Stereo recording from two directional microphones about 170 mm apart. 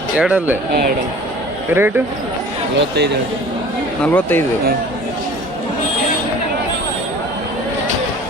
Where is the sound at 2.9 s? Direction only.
80° right.